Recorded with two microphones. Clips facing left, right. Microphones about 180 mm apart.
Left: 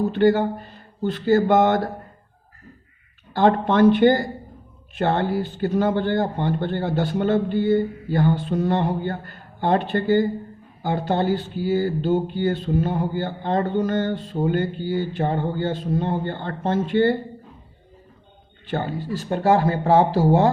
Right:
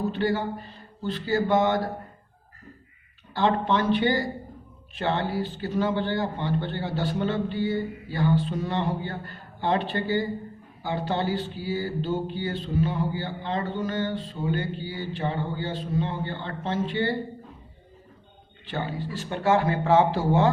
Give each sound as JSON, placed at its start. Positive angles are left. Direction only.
{"t": 0.1, "sound": "speech", "side_deg": 55}
{"t": 3.3, "sound": "speech", "side_deg": 50}
{"t": 18.6, "sound": "speech", "side_deg": 45}